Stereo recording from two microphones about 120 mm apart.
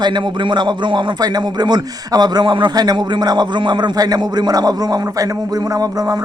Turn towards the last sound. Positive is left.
turn(degrees=-30)  # may be behind; listen again after turning